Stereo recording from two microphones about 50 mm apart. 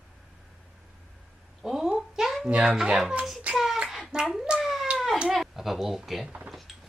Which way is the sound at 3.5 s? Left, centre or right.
Centre.